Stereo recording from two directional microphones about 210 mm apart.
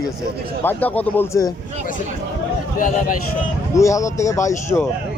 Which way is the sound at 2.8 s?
40° left (ahead or behind).